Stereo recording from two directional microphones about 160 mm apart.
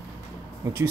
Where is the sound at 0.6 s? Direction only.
15° right (ahead or behind).